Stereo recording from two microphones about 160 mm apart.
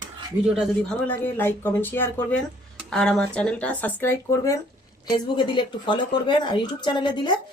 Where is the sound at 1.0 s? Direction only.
10° left (ahead or behind).